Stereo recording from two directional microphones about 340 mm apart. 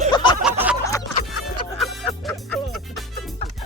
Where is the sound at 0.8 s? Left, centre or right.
Centre.